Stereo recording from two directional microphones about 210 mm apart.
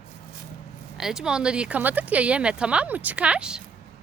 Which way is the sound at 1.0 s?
Centre (ahead or behind).